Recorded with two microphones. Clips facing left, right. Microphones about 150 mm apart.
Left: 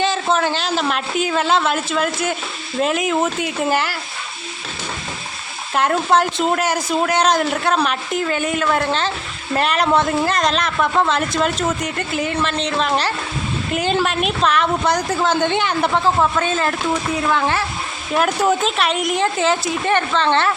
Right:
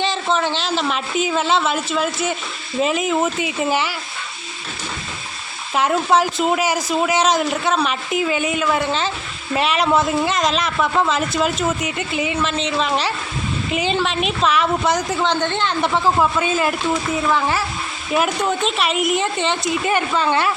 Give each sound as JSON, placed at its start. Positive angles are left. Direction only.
{"t": 0.0, "sound": "a man's voice", "side_deg": 0}
{"t": 5.7, "sound": "a man's voice", "side_deg": 0}
{"t": 16.4, "sound": "a man's voice", "side_deg": -10}